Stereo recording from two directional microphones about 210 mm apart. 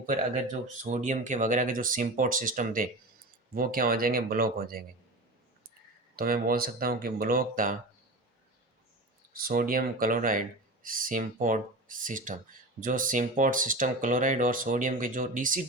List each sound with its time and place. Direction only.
0.0 s speech: 40° right (ahead or behind)
6.1 s speech: 45° right (ahead or behind)
9.3 s speech: 45° right (ahead or behind)